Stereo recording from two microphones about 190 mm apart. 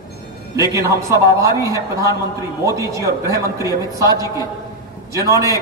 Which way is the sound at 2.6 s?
15° right (ahead or behind).